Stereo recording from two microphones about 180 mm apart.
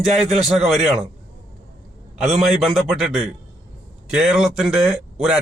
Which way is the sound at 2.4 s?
Centre (ahead or behind).